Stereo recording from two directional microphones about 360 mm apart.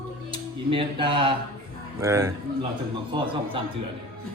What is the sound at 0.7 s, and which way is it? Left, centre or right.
A man's voice, centre.